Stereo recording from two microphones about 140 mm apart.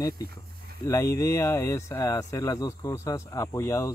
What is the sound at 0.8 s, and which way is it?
Speech, 20° left (ahead or behind).